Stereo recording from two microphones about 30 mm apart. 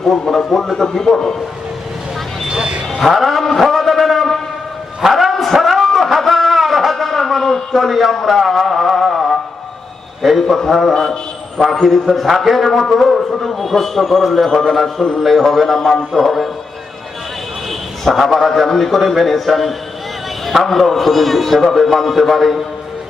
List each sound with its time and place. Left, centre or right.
0.1 s speech: centre
0.8 s a man's voice: centre
2.5 s vehicle: right
3.1 s a sound: centre
8.3 s music: centre
10.4 s a man's voice: centre
10.9 s a man's voice: left
11.8 s a man's voice: centre
15.0 s a man's voice: centre
18.0 s a man's voice: centre